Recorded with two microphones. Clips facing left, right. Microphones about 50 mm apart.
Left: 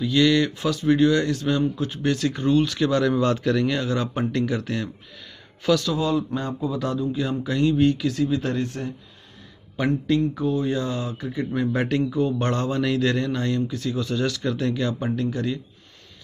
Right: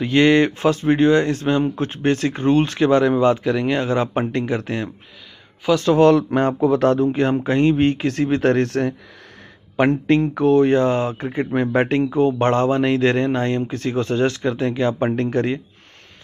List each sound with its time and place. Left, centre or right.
0.0 s a man's voice: right
3.7 s a man's voice: right
5.9 s speech: right
9.8 s a man's voice: right
15.0 s speech: right